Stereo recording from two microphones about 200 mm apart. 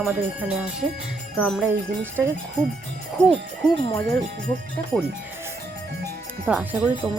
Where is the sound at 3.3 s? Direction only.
Centre (ahead or behind).